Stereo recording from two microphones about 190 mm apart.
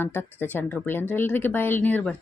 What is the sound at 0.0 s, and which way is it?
Speech, 10° left (ahead or behind).